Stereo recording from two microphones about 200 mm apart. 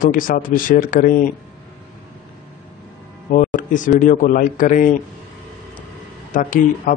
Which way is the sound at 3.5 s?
40° left (ahead or behind).